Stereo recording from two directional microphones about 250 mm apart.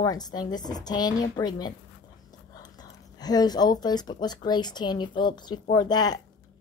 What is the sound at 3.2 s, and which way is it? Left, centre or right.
A woman's voice, centre.